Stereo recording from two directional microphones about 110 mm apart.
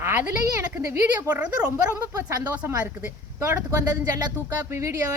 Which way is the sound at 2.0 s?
25° right (ahead or behind).